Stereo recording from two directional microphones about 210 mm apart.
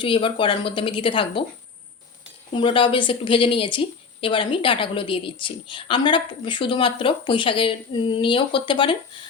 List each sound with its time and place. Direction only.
0.0 s speech: 25° left (ahead or behind)
2.5 s speech: 25° left (ahead or behind)